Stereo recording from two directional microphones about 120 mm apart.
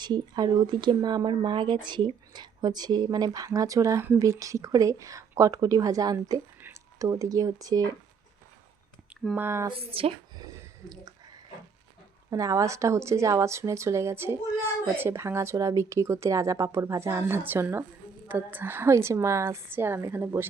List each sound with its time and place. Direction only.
0.0 s speech: 35° right (ahead or behind)
6.6 s speech: 20° right (ahead or behind)
9.3 s speech: 20° right (ahead or behind)
9.6 s speech: 50° right (ahead or behind)
10.3 s a sound: 30° right (ahead or behind)
12.3 s speech: 30° right (ahead or behind)